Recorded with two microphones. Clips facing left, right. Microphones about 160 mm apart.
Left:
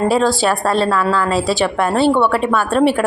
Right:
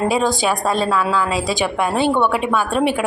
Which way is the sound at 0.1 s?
15° right (ahead or behind).